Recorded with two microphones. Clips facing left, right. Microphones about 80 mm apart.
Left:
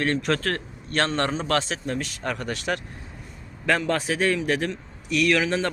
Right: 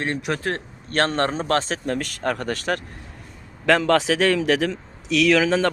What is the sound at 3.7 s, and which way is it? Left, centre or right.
A man's voice, right.